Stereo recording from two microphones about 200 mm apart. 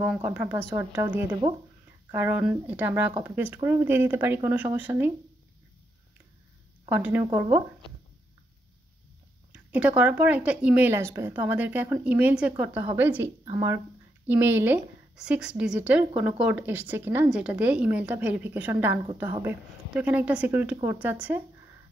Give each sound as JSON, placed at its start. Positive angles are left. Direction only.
{"t": 0.0, "sound": "speech", "side_deg": -5}
{"t": 6.9, "sound": "speech", "side_deg": -10}
{"t": 9.5, "sound": "speech", "side_deg": -5}